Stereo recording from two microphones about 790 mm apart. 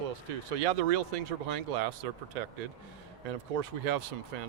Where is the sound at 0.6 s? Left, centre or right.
Right.